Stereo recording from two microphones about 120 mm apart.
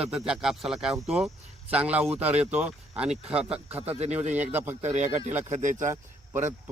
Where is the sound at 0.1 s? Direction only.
5° right (ahead or behind).